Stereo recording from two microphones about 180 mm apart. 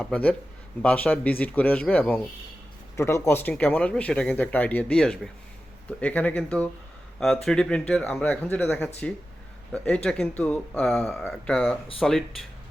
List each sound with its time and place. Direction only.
0.0 s speech: 10° left (ahead or behind)